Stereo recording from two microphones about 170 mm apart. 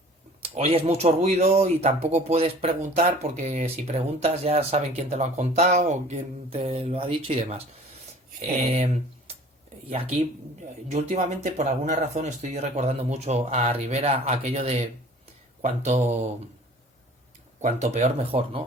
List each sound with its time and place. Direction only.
0.4 s a sound: 35° right (ahead or behind)
0.9 s speech: 40° right (ahead or behind)
8.7 s speech: 35° right (ahead or behind)
10.9 s speech: 40° right (ahead or behind)
17.6 s speech: 45° right (ahead or behind)